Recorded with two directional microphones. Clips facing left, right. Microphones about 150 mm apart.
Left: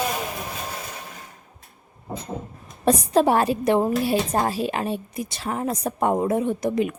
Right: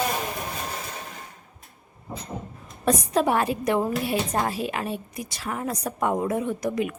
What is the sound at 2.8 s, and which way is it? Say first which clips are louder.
A woman's voice: left 4 dB; 30° left (ahead or behind).